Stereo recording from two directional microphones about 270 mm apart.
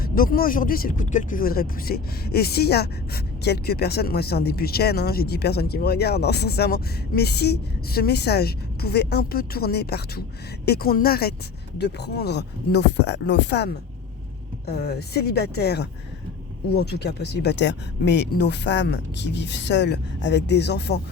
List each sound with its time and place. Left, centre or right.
0.0 s speech: left